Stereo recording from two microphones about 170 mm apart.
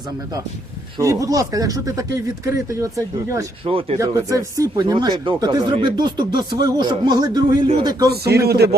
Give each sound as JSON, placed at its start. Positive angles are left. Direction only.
{"t": 0.9, "sound": "speech", "side_deg": -20}
{"t": 3.7, "sound": "speech", "side_deg": -35}
{"t": 4.0, "sound": "speech", "side_deg": -20}
{"t": 8.2, "sound": "speech", "side_deg": -70}